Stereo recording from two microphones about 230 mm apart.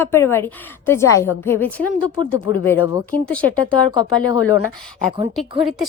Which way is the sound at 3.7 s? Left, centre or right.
Centre.